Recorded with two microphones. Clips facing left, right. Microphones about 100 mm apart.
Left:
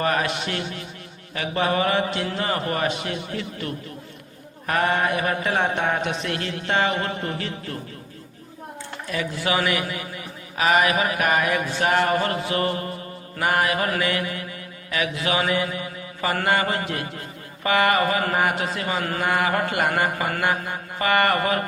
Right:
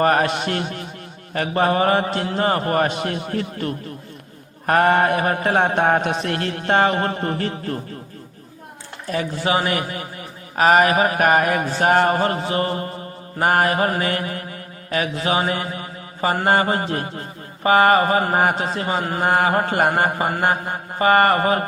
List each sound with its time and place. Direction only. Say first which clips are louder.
0.0 s mantra: right 6 dB; 45° right (ahead or behind)
9.0 s mantra: right 4 dB; 35° right (ahead or behind)
13.4 s mantra: right 4 dB; 40° right (ahead or behind)